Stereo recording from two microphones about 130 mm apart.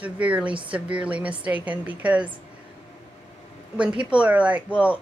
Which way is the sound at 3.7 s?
10° right (ahead or behind).